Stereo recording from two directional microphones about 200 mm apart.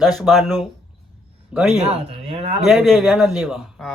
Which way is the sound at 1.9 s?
30° right (ahead or behind).